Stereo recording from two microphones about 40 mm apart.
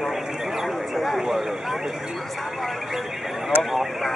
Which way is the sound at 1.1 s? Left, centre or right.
Centre.